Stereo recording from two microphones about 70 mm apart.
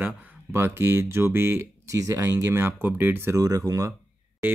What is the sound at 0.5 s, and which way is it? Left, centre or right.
Speech, right.